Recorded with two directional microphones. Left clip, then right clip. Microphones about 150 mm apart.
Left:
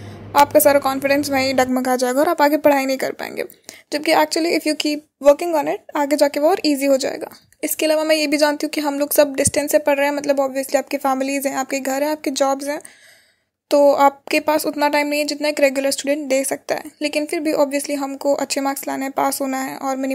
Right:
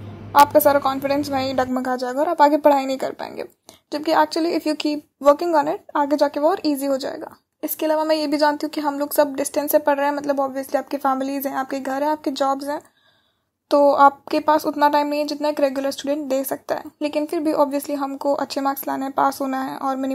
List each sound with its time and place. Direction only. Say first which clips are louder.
0.3 s a woman's voice: left 1 dB; 15° left (ahead or behind)
2.3 s a woman's voice: right 4 dB; 15° left (ahead or behind)
9.5 s a woman's voice: left 2 dB; 15° left (ahead or behind)
13.7 s a woman's voice: left 1 dB; 15° left (ahead or behind)